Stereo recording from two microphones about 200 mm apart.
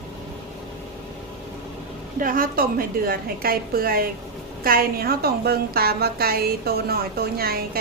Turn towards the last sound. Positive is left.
turn(degrees=-50)  # may be behind; listen again after turning